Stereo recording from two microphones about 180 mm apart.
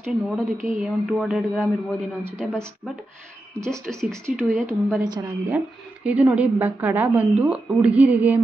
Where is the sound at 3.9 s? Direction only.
5° left (ahead or behind).